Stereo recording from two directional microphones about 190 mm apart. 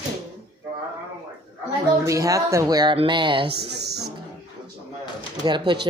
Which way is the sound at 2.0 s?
15° right (ahead or behind).